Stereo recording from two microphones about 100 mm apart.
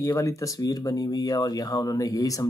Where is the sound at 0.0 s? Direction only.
30° left (ahead or behind).